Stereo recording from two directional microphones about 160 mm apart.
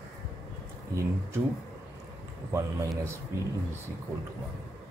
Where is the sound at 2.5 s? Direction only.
20° right (ahead or behind).